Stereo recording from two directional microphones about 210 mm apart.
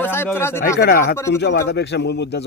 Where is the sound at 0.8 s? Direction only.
50° left (ahead or behind).